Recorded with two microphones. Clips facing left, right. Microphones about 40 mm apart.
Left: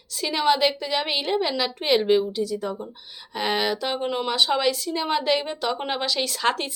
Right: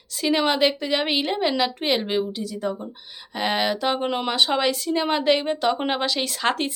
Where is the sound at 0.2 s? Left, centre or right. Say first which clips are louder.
Right 1 dB; right.